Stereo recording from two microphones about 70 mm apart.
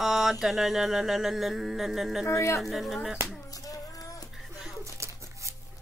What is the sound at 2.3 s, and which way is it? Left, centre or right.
Speech, left.